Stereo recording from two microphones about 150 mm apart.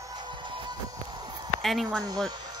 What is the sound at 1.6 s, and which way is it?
Speech, centre (ahead or behind).